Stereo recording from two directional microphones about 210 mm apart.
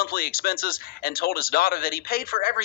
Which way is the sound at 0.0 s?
45° left (ahead or behind).